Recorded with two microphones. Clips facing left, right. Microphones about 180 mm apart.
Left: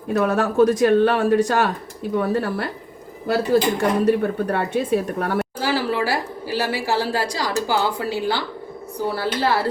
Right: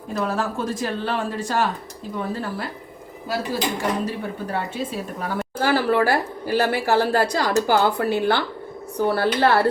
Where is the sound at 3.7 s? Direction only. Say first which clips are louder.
Left 7 dB; 60° left (ahead or behind).